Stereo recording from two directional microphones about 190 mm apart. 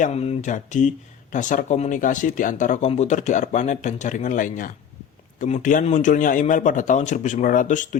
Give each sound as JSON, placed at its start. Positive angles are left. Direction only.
{"t": 0.0, "sound": "speech", "side_deg": 35}